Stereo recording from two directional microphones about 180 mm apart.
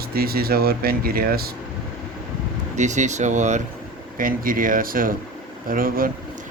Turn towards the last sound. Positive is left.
turn(degrees=-55)  # may be behind; listen again after turning